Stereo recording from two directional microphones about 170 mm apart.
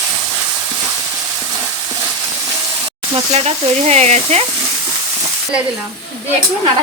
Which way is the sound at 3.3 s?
40° right (ahead or behind).